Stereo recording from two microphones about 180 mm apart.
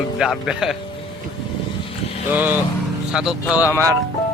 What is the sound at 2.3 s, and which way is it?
Speech, 10° right (ahead or behind).